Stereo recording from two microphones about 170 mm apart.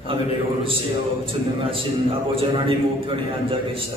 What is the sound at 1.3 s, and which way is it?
A man's voice, 30° right (ahead or behind).